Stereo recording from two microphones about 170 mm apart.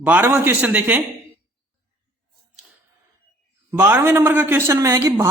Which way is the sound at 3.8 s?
15° right (ahead or behind).